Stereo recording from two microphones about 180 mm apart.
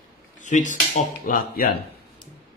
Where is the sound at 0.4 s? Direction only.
45° left (ahead or behind).